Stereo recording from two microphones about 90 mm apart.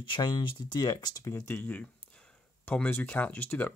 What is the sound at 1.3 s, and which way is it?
Speech, 30° left (ahead or behind).